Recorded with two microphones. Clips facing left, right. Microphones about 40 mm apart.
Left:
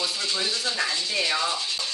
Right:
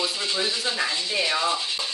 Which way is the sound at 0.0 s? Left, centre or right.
Centre.